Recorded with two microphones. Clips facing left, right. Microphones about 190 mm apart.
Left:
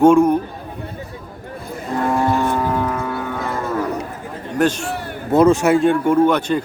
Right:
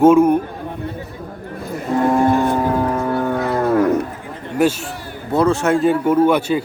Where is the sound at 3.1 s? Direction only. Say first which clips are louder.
Right 6 dB; 50° right (ahead or behind).